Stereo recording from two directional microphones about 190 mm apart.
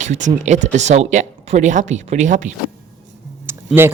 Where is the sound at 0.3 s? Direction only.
40° right (ahead or behind).